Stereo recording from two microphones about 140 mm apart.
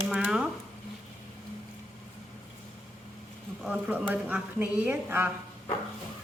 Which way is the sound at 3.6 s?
10° right (ahead or behind).